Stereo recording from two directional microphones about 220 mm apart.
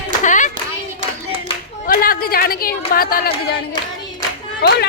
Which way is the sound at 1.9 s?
40° left (ahead or behind).